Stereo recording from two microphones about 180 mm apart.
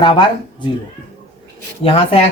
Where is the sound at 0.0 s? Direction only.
25° left (ahead or behind).